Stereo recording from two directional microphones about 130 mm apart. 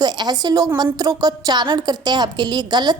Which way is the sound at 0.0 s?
30° right (ahead or behind).